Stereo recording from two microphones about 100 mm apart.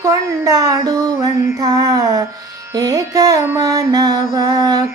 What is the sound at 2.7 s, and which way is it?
Music, 40° right (ahead or behind).